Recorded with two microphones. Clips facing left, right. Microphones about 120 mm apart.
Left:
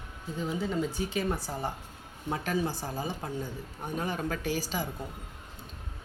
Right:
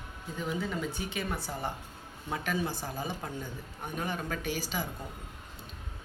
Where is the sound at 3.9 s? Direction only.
35° left (ahead or behind).